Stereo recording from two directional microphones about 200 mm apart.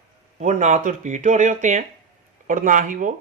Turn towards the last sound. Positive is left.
turn(degrees=-40)  # may be behind; listen again after turning